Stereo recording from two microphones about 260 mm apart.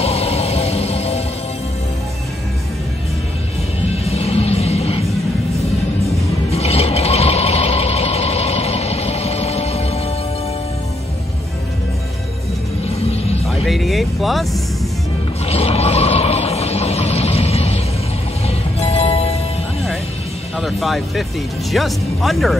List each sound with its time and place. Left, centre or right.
0.0 s music: left
3.9 s music: left
6.5 s vehicle: left
12.8 s music: left
13.7 s vehicle: centre
15.4 s a sound: left
18.5 s music: left
20.5 s music: centre
21.7 s speech: centre